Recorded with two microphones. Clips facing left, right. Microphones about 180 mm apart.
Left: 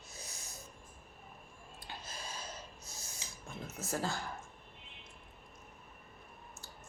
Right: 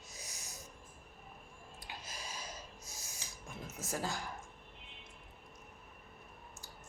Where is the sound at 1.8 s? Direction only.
10° right (ahead or behind).